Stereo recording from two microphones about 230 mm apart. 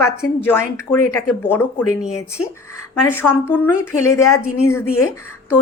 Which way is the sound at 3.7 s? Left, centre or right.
Left.